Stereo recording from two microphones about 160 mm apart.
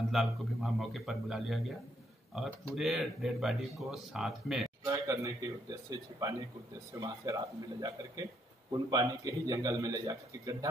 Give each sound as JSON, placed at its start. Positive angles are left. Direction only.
{"t": 0.1, "sound": "speech", "side_deg": 0}
{"t": 2.7, "sound": "speech", "side_deg": 0}
{"t": 4.8, "sound": "a man's voice", "side_deg": -20}